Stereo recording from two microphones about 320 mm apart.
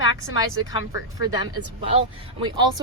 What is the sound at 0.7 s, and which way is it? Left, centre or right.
Speech, centre.